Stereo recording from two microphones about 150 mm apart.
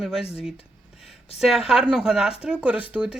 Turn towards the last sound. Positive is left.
turn(degrees=-10)  # may be behind; listen again after turning